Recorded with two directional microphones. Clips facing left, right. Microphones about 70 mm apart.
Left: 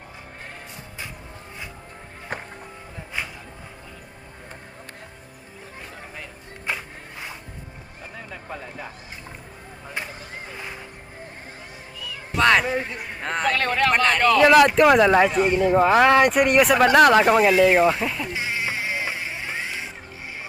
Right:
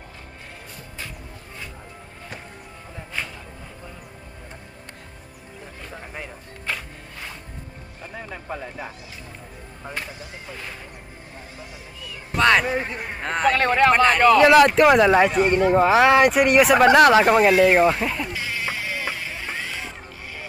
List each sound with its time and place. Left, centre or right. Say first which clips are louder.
2.3 s music: left 7 dB; left
3.1 s a sound: even; centre
6.7 s a sound: left 1 dB; centre
8.1 s a sound: right 3 dB; centre
12.4 s speech: even; centre
12.8 s a man's voice: right 2 dB; right
13.2 s speech: right 3 dB; centre
13.5 s speech: right 5 dB; centre
13.9 s speech: right 2 dB; centre
18.3 s music: left 1 dB; left